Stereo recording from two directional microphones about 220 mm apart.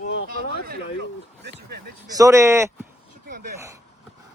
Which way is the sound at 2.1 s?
15° right (ahead or behind).